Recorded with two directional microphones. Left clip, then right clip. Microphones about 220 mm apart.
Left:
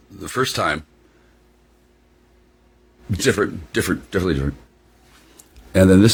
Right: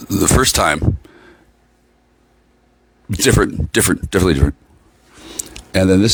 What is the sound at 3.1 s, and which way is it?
Speech, 55° right (ahead or behind).